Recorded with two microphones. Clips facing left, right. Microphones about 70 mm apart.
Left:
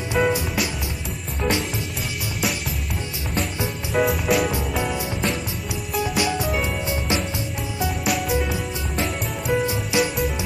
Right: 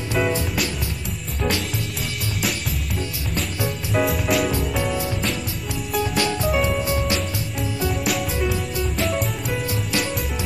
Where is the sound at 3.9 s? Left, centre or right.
Centre.